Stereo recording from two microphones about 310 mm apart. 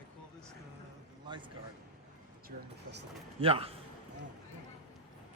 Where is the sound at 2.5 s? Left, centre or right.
Right.